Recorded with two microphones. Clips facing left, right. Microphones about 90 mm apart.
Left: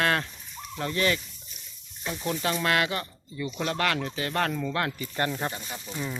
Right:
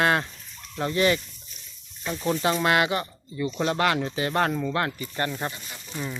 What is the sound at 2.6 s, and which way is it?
Speech, 15° right (ahead or behind).